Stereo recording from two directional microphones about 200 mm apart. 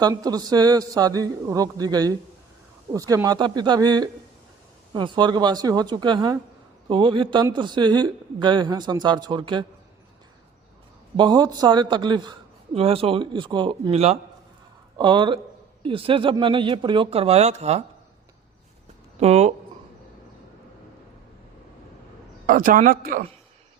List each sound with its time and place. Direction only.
0.0 s speech: 20° right (ahead or behind)
11.2 s speech: 20° right (ahead or behind)
19.2 s speech: 35° right (ahead or behind)
22.4 s a man's voice: 45° right (ahead or behind)